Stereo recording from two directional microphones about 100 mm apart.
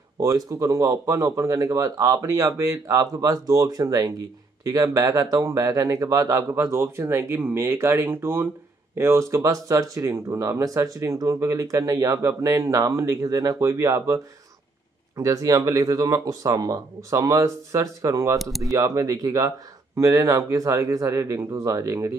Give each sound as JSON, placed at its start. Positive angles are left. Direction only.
{"t": 0.2, "sound": "speech", "side_deg": -35}
{"t": 18.4, "sound": "speech", "side_deg": 0}
{"t": 18.7, "sound": "speech", "side_deg": -35}